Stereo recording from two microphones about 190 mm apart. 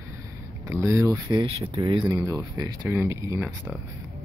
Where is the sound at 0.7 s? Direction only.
15° right (ahead or behind).